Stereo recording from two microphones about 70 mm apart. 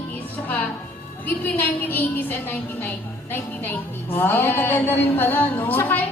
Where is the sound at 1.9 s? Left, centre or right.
Left.